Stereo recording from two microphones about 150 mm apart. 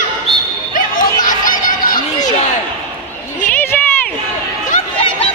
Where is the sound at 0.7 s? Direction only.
60° left (ahead or behind).